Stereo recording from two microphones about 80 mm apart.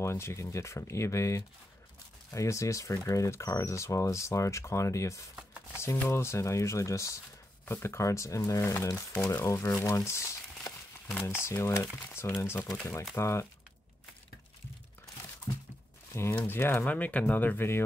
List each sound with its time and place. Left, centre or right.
0.0 s speech: left
15.5 s a sound: left
16.1 s speech: left